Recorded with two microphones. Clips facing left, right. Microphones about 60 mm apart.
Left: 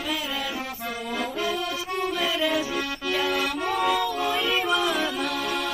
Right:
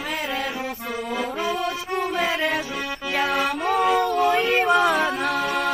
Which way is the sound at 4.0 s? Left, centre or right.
Right.